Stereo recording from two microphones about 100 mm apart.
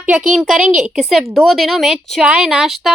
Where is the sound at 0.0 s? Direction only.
15° right (ahead or behind).